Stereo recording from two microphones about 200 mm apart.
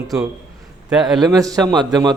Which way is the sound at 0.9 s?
Centre (ahead or behind).